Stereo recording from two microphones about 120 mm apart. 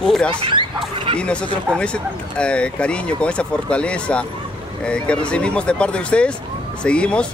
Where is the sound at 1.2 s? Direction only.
10° left (ahead or behind).